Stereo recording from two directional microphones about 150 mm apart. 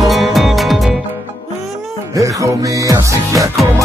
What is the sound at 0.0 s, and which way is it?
Music, centre (ahead or behind).